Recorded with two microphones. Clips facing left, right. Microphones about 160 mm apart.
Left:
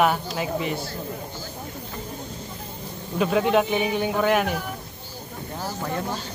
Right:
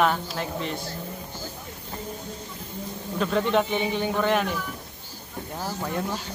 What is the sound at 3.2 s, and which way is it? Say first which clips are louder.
Speech: left 3 dB; 10° left (ahead or behind).